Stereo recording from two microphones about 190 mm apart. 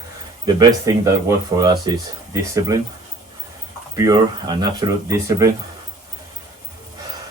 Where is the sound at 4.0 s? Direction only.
20° right (ahead or behind).